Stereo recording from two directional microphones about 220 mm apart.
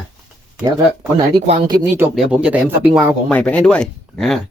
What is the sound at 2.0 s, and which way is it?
Speech, 5° right (ahead or behind).